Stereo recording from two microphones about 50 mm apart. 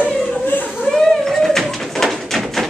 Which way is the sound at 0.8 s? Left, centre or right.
Centre.